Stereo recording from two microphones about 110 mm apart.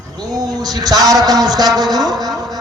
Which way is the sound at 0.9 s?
35° right (ahead or behind).